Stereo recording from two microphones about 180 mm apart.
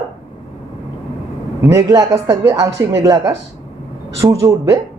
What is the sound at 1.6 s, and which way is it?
A man's voice, 20° right (ahead or behind).